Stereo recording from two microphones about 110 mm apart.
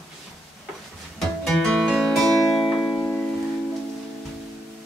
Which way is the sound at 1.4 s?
5° left (ahead or behind).